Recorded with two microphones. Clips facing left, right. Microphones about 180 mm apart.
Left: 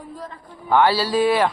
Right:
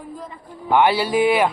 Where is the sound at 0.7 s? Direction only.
20° right (ahead or behind).